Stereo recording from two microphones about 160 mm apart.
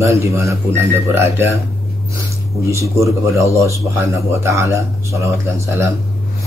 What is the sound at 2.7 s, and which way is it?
Speech, 20° right (ahead or behind).